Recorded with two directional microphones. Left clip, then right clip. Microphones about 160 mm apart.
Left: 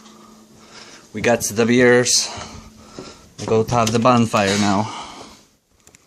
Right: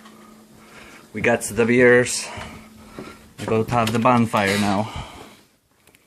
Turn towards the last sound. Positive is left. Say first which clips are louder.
# left 3 dB
turn(degrees=20)  # may be behind; listen again after turning